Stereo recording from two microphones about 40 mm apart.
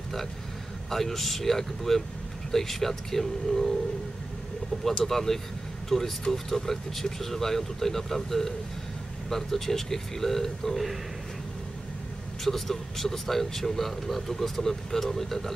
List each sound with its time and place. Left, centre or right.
0.8 s speech: centre
5.0 s speech: centre
12.4 s speech: centre